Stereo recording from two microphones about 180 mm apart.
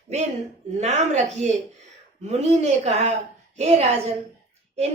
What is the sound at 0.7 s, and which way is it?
Speech, 40° right (ahead or behind).